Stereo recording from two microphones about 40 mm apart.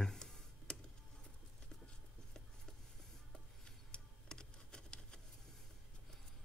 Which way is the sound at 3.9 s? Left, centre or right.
Left.